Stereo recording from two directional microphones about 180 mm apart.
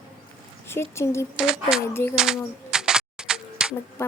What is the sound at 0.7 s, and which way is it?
Speech, 15° left (ahead or behind).